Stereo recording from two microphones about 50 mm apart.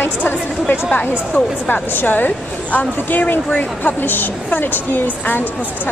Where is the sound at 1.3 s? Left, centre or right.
Left.